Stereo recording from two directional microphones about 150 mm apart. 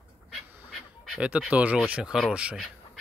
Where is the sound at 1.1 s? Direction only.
10° right (ahead or behind).